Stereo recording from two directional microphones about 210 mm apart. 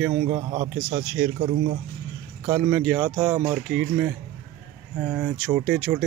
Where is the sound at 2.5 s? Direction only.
5° right (ahead or behind).